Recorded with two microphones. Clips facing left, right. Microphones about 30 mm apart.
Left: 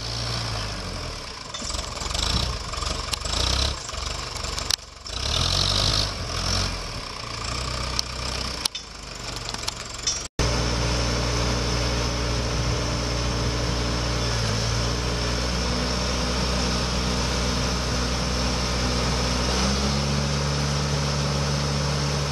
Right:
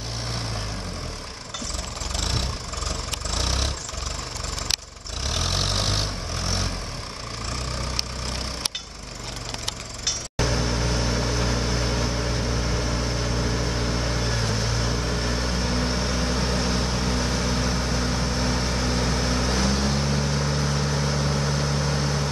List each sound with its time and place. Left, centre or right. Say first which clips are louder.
2.1 s vehicle: left 2 dB; left
5.3 s vehicle: left 2 dB; left
10.0 s vehicle: right 1 dB; centre